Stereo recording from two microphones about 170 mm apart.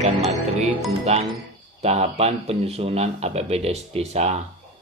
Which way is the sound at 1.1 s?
40° right (ahead or behind).